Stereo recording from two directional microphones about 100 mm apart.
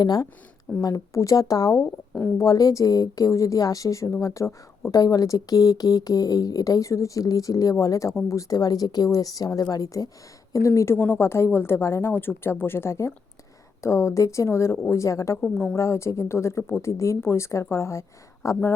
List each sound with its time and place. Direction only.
0.0 s a woman's voice: 40° left (ahead or behind)